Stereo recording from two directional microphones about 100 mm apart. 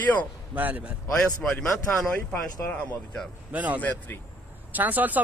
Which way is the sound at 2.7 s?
10° left (ahead or behind).